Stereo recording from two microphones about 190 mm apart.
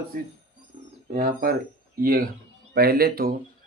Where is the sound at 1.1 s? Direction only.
50° right (ahead or behind).